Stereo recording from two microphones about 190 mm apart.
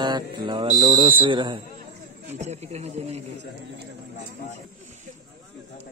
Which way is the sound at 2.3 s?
35° right (ahead or behind).